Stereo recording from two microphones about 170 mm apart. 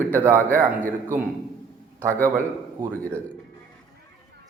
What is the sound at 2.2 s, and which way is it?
Speech, 15° right (ahead or behind).